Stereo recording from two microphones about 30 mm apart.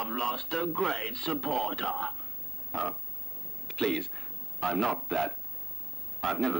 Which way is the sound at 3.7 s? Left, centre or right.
Centre.